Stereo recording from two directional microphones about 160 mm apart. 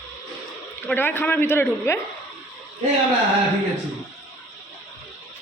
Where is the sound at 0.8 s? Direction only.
15° left (ahead or behind).